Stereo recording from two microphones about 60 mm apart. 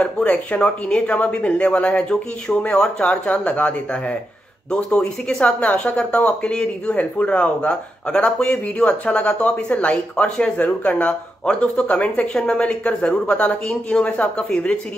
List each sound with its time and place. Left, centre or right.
0.0 s speech: left